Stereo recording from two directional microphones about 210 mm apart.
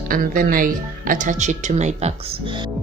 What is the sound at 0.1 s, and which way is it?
Speech, 40° right (ahead or behind).